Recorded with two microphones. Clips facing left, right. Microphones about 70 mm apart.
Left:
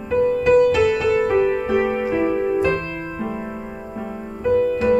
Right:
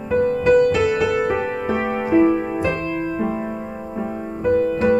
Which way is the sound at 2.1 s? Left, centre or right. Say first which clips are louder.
Right 6 dB; centre.